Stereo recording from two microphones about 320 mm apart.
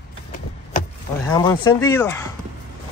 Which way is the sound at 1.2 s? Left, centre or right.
Centre.